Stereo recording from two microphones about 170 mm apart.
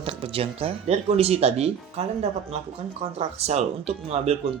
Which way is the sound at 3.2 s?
40° right (ahead or behind).